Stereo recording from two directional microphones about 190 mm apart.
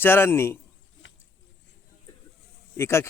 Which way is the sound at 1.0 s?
90° left.